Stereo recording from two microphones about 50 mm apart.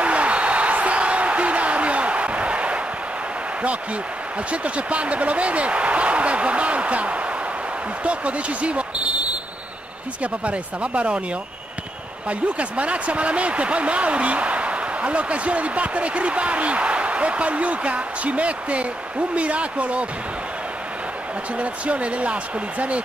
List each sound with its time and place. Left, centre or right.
0.0 s a sound: right
4.5 s speech: right
10.2 s speech: right
12.3 s speech: right
21.5 s speech: right